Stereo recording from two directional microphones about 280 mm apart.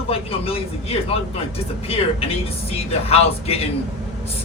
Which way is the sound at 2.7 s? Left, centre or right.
Left.